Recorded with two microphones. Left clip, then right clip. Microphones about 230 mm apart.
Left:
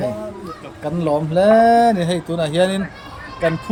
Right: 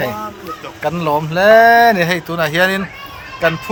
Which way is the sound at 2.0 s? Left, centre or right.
Right.